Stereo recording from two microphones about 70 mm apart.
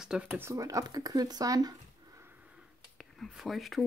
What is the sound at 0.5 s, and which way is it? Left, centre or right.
Speech, right.